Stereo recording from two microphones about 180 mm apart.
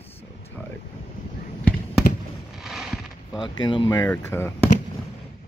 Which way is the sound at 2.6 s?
Centre (ahead or behind).